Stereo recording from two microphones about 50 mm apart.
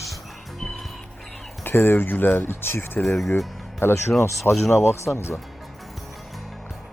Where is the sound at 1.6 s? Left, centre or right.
Left.